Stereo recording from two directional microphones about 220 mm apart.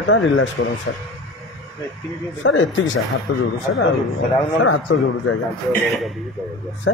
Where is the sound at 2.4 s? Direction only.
60° left (ahead or behind).